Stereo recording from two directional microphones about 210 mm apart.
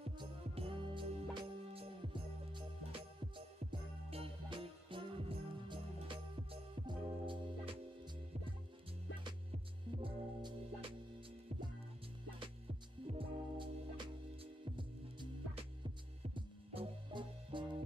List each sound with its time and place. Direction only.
0.2 s music: 25° right (ahead or behind)
9.2 s music: 25° right (ahead or behind)
13.0 s music: 25° right (ahead or behind)